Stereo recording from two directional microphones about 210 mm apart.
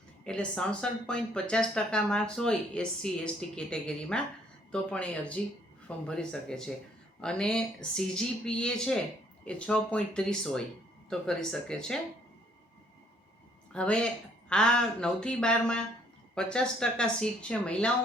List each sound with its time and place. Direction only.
0.3 s speech: 5° left (ahead or behind)
13.7 s speech: 5° left (ahead or behind)